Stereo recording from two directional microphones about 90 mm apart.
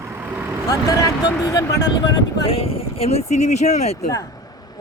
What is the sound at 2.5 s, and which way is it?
Speech, 90° left.